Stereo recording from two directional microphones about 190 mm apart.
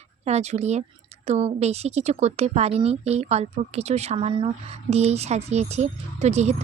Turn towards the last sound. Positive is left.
turn(degrees=-35)  # may be behind; listen again after turning